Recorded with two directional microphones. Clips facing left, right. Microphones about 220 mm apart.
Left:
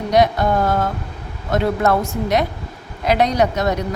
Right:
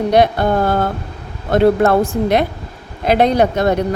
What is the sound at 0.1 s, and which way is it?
Speech, 30° right (ahead or behind).